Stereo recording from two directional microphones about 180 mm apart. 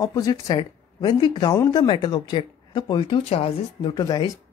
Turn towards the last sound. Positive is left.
turn(degrees=25)  # may be behind; listen again after turning